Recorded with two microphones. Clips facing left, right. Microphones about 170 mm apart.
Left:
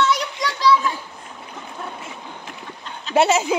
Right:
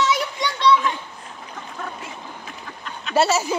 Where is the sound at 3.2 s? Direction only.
15° left (ahead or behind).